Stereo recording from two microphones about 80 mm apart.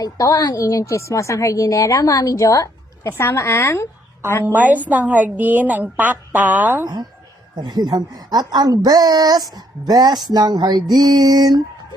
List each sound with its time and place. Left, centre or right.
0.0 s a woman's voice: left
4.4 s a woman's voice: right
6.8 s a woman's voice: right